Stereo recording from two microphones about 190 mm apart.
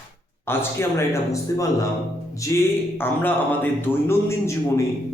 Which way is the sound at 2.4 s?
15° left (ahead or behind).